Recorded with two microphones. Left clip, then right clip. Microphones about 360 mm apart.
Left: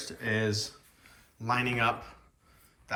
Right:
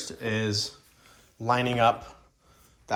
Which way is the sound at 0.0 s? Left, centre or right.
Centre.